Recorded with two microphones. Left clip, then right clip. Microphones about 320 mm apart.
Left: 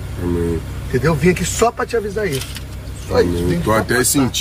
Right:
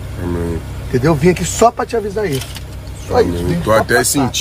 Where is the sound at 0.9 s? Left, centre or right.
Right.